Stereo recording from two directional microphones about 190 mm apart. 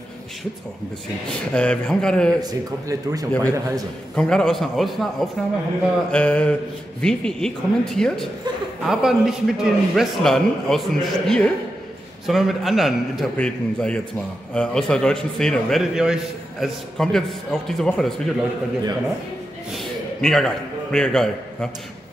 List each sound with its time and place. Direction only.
1.5 s a man's voice: 5° left (ahead or behind)
2.4 s a man's voice: 20° right (ahead or behind)
4.1 s a man's voice: 5° left (ahead or behind)
19.7 s a man's voice: centre (ahead or behind)